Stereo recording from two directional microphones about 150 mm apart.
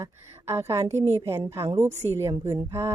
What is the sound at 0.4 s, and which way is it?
A woman's voice, 15° right (ahead or behind).